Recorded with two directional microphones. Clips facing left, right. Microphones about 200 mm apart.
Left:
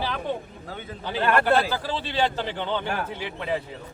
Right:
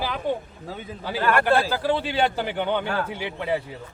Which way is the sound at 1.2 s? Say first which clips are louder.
Even; 20° left (ahead or behind).